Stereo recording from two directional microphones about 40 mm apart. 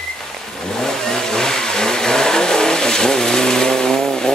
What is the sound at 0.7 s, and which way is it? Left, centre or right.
Vehicle, centre.